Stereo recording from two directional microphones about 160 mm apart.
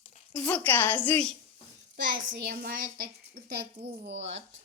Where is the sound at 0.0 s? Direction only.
40° left (ahead or behind).